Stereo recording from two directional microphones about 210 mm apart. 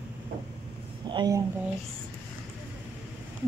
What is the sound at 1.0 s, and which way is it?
Speech, 20° right (ahead or behind).